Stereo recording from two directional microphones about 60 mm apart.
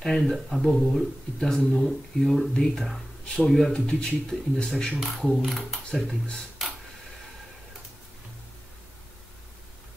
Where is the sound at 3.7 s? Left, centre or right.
Centre.